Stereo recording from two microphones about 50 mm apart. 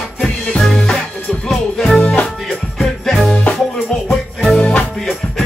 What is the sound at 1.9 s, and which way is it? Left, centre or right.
Music, left.